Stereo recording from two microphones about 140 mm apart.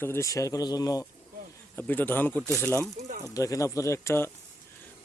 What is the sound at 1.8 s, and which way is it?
Speech, 15° left (ahead or behind).